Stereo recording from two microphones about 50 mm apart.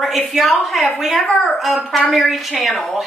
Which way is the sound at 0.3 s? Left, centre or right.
Centre.